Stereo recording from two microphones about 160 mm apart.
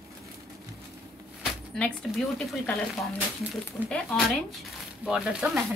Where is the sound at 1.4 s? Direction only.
5° left (ahead or behind).